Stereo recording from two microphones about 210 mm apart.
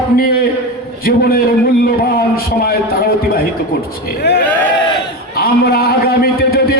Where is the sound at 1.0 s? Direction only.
45° left (ahead or behind).